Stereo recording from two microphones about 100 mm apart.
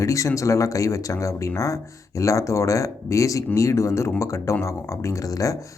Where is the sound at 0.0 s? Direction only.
30° left (ahead or behind).